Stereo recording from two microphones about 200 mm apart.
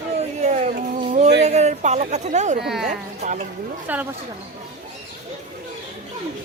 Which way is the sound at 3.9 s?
10° right (ahead or behind).